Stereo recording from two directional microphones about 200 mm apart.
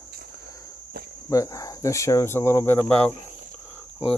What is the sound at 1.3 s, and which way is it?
Speech, 15° left (ahead or behind).